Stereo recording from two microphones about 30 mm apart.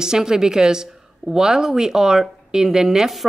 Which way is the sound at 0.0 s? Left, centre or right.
Right.